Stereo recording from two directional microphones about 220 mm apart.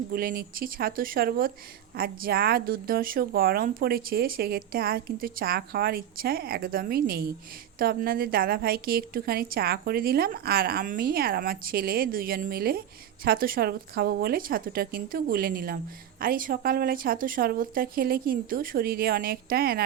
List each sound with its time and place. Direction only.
0.1 s a woman's voice: 40° right (ahead or behind)